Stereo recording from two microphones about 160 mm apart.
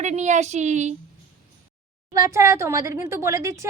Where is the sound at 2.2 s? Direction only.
20° right (ahead or behind).